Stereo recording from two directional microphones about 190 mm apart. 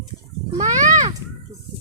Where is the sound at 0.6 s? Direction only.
40° right (ahead or behind).